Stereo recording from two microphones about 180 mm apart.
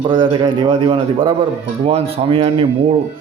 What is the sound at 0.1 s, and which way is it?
A man's voice, 25° right (ahead or behind).